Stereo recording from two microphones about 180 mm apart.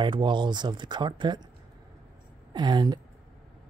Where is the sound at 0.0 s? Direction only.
25° right (ahead or behind).